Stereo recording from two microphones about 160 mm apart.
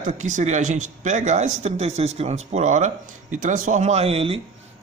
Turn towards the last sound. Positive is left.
turn(degrees=-35)  # may be behind; listen again after turning